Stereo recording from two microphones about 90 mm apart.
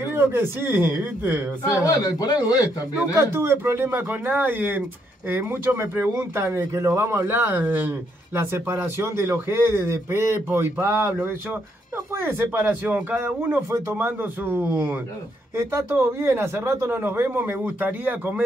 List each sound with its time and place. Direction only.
0.1 s a man's voice: 25° right (ahead or behind)
1.7 s a man's voice: 35° left (ahead or behind)
3.3 s a man's voice: 25° right (ahead or behind)